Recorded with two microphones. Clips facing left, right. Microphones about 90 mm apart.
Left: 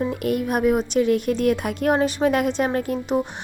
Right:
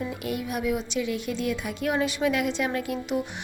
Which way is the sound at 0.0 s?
50° left (ahead or behind).